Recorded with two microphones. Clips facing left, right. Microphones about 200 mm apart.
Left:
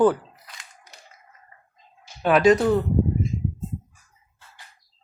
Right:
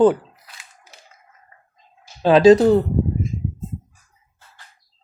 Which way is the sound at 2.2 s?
30° right (ahead or behind).